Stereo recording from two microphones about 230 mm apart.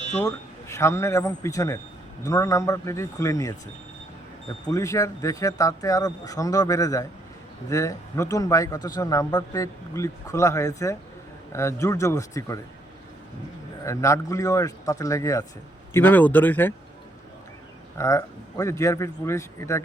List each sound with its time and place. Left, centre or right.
0.2 s a man's voice: centre
4.6 s a man's voice: centre
13.8 s a man's voice: centre
17.9 s a man's voice: centre